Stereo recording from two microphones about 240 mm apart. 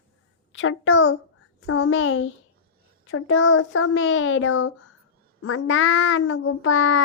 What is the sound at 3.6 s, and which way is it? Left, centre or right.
Child singing, left.